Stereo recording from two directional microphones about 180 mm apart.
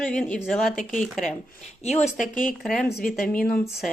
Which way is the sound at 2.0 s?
45° left (ahead or behind).